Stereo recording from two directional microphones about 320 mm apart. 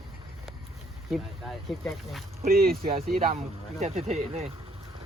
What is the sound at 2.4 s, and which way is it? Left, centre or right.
Speech, right.